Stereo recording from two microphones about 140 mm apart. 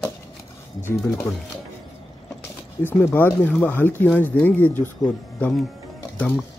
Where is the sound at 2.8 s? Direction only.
15° left (ahead or behind).